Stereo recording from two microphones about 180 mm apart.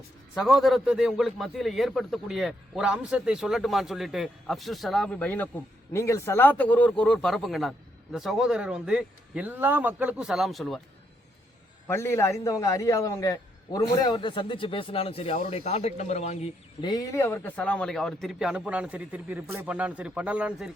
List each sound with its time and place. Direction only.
0.3 s a man's voice: centre (ahead or behind)
11.9 s a man's voice: 15° left (ahead or behind); by 16.5 s 40° left (ahead or behind)
16.8 s a man's voice: 20° left (ahead or behind); by 20.7 s 5° right (ahead or behind)